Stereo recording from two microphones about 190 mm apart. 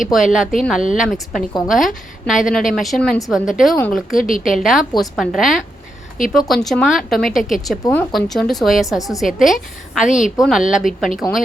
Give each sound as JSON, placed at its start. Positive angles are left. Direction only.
{"t": 0.3, "sound": "a woman's voice", "side_deg": 0}
{"t": 4.2, "sound": "a woman's voice", "side_deg": 45}
{"t": 4.4, "sound": "a woman's voice", "side_deg": 0}
{"t": 10.1, "sound": "speech", "side_deg": 40}
{"t": 10.3, "sound": "a woman's voice", "side_deg": 0}